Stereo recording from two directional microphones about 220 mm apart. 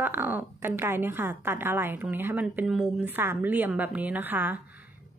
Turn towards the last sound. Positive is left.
turn(degrees=-5)  # may be behind; listen again after turning